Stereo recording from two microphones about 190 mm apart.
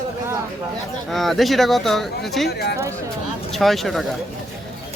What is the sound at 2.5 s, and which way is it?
Speech, 60° left (ahead or behind).